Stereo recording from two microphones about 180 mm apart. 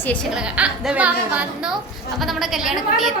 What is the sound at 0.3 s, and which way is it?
A woman's voice, 5° right (ahead or behind).